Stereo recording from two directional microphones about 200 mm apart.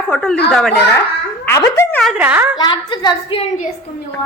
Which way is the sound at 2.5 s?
20° left (ahead or behind).